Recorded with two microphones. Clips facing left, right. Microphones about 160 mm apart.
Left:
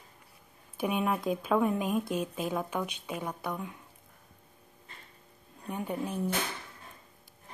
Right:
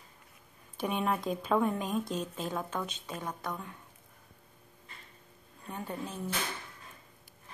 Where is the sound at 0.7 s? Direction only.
5° left (ahead or behind).